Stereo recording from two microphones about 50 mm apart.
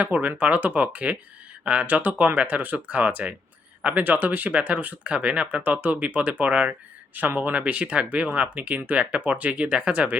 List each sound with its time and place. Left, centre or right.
0.0 s speech: right